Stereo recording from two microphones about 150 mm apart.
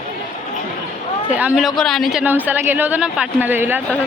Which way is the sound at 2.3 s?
10° right (ahead or behind).